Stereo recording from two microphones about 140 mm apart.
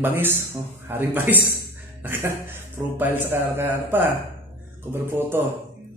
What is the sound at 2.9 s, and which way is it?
A man's voice, 15° right (ahead or behind).